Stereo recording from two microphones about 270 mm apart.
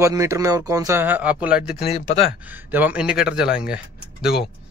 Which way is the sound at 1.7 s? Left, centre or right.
Left.